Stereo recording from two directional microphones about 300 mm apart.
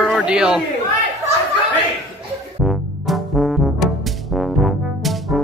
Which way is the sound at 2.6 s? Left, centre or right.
Centre.